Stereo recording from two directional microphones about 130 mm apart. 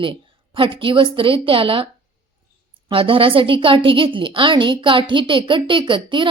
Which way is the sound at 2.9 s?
45° right (ahead or behind).